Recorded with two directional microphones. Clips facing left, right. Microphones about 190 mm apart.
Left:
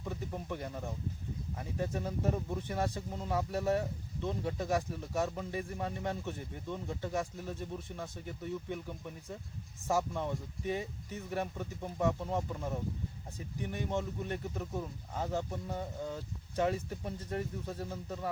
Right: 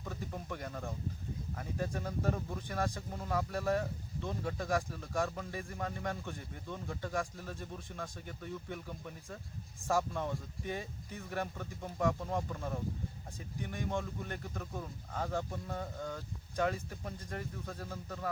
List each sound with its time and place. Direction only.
0.0 s speech: 15° left (ahead or behind)
10.1 s speech: 15° left (ahead or behind)